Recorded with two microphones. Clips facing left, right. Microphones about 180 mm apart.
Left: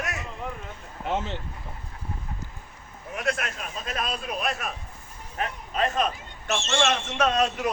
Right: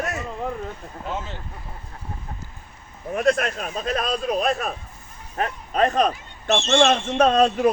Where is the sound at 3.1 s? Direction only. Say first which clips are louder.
Right 9 dB; 35° right (ahead or behind).